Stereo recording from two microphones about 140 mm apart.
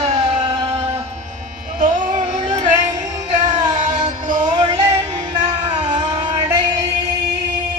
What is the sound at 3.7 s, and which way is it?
Music, 65° right (ahead or behind).